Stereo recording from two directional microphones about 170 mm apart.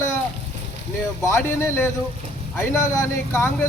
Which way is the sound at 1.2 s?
15° left (ahead or behind).